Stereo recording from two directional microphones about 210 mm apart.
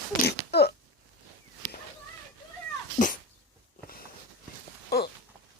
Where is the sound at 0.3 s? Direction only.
50° left (ahead or behind).